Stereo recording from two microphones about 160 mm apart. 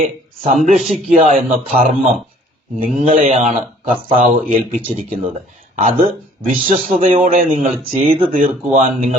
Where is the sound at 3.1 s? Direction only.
50° right (ahead or behind).